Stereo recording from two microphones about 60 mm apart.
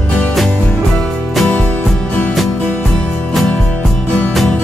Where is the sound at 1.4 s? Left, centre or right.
Left.